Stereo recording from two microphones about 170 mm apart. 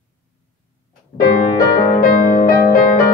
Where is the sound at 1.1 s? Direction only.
55° left (ahead or behind).